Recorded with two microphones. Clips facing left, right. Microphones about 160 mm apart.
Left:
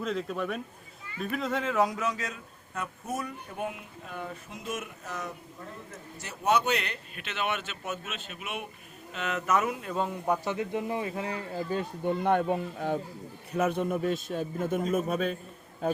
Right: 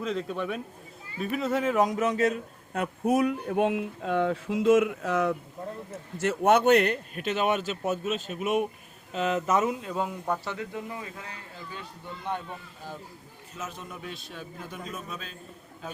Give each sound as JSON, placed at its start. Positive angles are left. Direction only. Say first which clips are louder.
{"t": 0.0, "sound": "a man's voice", "louder": "right 1 dB", "side_deg": 0}
{"t": 2.2, "sound": "speech", "louder": "right 13 dB", "side_deg": -60}
{"t": 6.1, "sound": "speech", "louder": "right 5 dB", "side_deg": -65}
{"t": 10.2, "sound": "speech", "louder": "left 3 dB", "side_deg": 15}
{"t": 11.7, "sound": "a man's voice", "louder": "left 13 dB", "side_deg": 50}